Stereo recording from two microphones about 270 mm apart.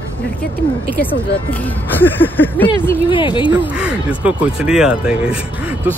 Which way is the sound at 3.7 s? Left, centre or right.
Centre.